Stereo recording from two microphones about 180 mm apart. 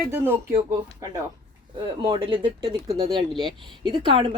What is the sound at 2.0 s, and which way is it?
Speech, 30° right (ahead or behind).